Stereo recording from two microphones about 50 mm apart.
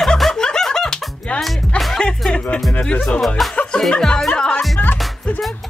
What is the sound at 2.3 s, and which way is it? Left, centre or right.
Music, left.